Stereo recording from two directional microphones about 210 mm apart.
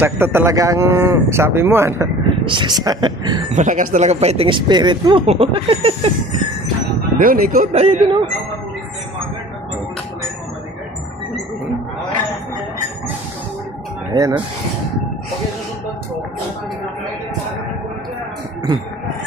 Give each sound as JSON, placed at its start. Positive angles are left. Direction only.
{"t": 0.0, "sound": "speech", "side_deg": -10}
{"t": 2.4, "sound": "speech", "side_deg": -20}
{"t": 3.5, "sound": "speech", "side_deg": -35}
{"t": 7.2, "sound": "speech", "side_deg": -40}
{"t": 14.1, "sound": "speech", "side_deg": -20}